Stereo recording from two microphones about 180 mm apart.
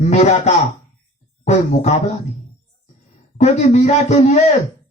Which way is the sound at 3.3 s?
40° left (ahead or behind).